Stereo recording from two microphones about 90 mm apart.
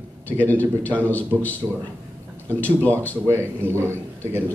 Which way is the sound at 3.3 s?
30° right (ahead or behind).